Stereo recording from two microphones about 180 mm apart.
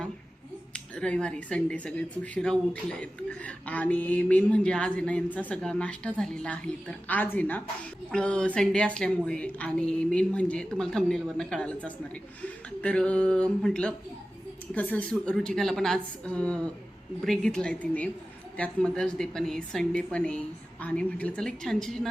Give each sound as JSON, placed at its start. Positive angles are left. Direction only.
{"t": 0.7, "sound": "a woman's voice", "side_deg": 5}